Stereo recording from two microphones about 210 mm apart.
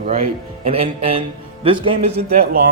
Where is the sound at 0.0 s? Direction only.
40° right (ahead or behind).